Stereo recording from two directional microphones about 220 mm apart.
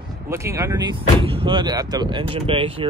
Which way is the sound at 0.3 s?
15° right (ahead or behind).